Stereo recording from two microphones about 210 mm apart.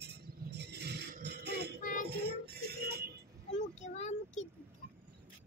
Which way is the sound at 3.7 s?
35° left (ahead or behind).